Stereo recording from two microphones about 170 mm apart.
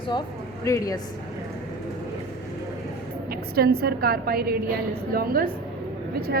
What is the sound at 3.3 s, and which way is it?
A woman's voice, 65° right (ahead or behind).